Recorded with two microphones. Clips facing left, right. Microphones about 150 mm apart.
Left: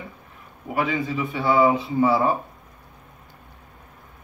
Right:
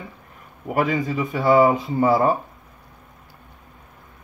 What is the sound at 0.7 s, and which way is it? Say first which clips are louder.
A man's voice: right 3 dB; 45° right (ahead or behind).